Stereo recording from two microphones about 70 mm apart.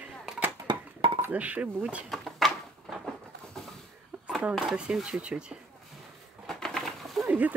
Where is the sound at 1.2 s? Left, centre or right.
Right.